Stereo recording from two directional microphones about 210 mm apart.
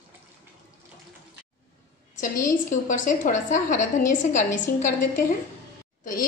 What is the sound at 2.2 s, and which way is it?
A woman's voice, 40° left (ahead or behind).